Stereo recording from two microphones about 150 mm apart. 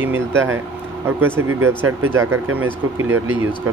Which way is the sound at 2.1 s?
15° right (ahead or behind).